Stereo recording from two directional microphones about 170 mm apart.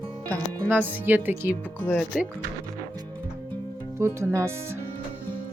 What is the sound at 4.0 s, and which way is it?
Speech, 15° right (ahead or behind).